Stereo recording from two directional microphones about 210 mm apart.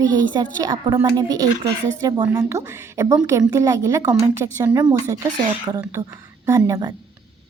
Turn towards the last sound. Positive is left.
turn(degrees=-15)  # may be behind; listen again after turning